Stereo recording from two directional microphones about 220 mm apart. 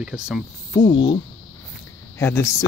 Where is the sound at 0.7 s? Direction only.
20° left (ahead or behind).